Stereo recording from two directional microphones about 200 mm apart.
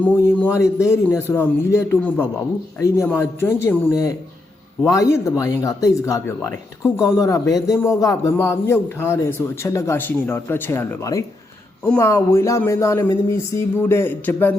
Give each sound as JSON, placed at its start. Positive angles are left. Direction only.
{"t": 0.0, "sound": "speech", "side_deg": 10}